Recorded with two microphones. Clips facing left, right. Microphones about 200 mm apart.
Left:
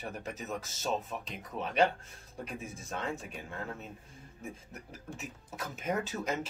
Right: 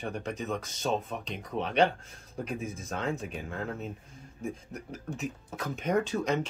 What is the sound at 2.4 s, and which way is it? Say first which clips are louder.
Speech: right 6 dB; 35° right (ahead or behind).